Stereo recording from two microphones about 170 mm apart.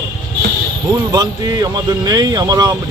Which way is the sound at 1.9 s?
25° right (ahead or behind).